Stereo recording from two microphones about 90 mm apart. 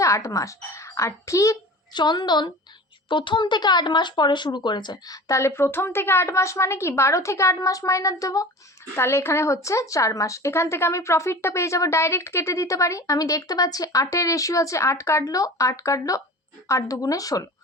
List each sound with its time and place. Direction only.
0.0 s a child's voice: 35° left (ahead or behind)
1.9 s a woman's voice: 55° left (ahead or behind)
3.1 s a woman's voice: 65° left (ahead or behind); by 8.4 s 40° left (ahead or behind)
9.0 s a woman's voice: 30° left (ahead or behind)